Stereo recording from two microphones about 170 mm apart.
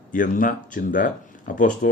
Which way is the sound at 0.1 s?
55° left (ahead or behind).